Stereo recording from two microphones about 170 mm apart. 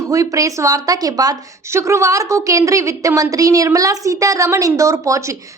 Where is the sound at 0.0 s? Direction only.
20° right (ahead or behind).